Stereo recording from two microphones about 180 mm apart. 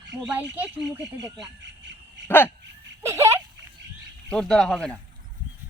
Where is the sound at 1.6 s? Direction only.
80° right.